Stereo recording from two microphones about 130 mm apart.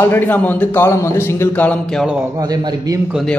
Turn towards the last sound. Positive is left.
turn(degrees=0)  # may be behind; listen again after turning